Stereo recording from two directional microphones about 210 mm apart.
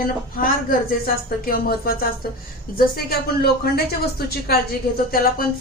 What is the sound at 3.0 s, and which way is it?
Speech, 50° left (ahead or behind).